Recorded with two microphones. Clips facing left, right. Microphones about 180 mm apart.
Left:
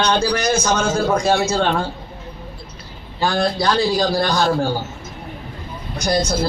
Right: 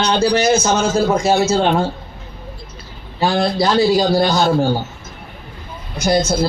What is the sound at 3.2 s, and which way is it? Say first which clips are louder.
A man's voice: right 2 dB; 20° right (ahead or behind).